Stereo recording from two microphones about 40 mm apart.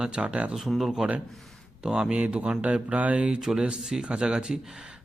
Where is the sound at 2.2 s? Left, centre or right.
Right.